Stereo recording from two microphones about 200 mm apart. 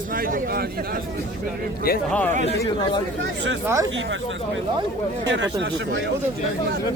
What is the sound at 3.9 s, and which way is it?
Speech, 70° right (ahead or behind).